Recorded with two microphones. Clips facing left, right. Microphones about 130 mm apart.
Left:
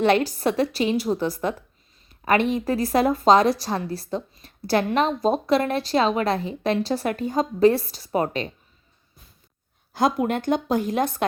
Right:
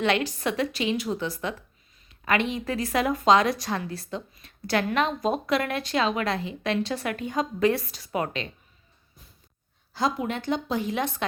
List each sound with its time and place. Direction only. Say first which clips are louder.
0.0 s speech: left 5 dB; 40° left (ahead or behind)
9.9 s speech: left 5 dB; 50° left (ahead or behind)